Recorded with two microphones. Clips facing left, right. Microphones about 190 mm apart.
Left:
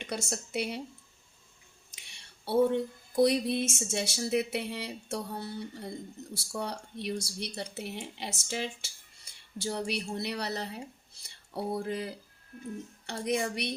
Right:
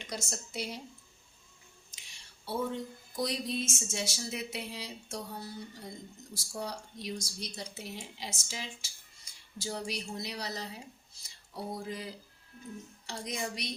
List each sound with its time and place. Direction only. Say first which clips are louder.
0.0 s speech: left 5 dB; 65° left (ahead or behind)
1.9 s a sound: left 2 dB; 65° left (ahead or behind)
6.3 s speech: left 3 dB; 65° left (ahead or behind)